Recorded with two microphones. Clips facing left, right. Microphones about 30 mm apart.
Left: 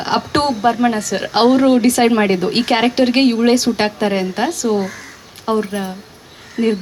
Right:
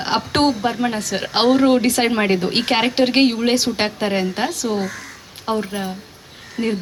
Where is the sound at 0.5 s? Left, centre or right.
Centre.